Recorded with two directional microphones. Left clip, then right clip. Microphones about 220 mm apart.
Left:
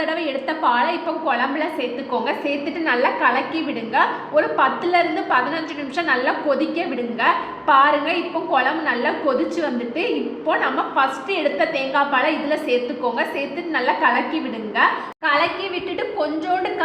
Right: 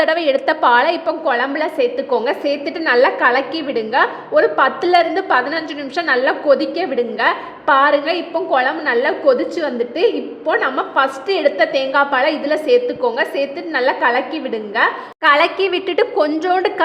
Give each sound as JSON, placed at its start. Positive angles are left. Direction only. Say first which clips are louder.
{"t": 0.0, "sound": "a woman's voice", "louder": "right 8 dB", "side_deg": -40}